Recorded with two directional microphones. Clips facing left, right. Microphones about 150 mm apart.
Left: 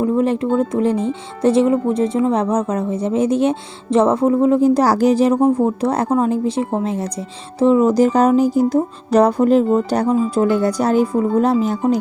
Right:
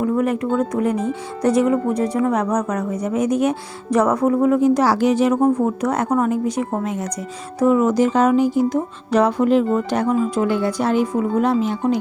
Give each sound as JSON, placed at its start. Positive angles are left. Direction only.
{"t": 0.0, "sound": "speech", "side_deg": 25}